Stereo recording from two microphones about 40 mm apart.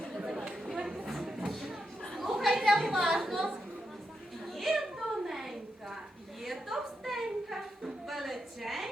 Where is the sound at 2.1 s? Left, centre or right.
Centre.